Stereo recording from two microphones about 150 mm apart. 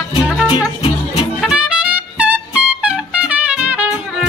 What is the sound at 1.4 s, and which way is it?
Music, 5° right (ahead or behind).